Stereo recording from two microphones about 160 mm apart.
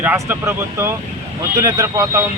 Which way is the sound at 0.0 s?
10° right (ahead or behind).